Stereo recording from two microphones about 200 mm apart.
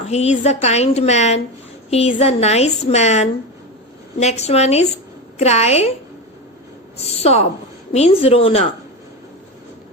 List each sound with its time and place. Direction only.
0.1 s a woman's voice: 35° left (ahead or behind)
6.9 s a woman's voice: 30° left (ahead or behind)